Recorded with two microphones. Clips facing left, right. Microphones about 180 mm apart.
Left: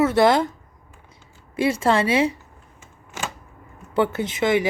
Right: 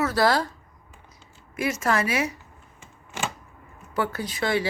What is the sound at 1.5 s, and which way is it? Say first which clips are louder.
Speech: left 5 dB; 30° left (ahead or behind).